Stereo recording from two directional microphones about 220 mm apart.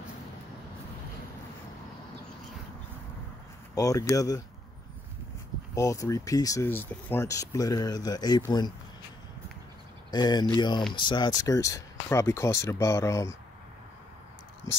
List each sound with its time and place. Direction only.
3.7 s speech: 15° left (ahead or behind)
5.8 s speech: 15° left (ahead or behind)
10.1 s speech: 20° left (ahead or behind)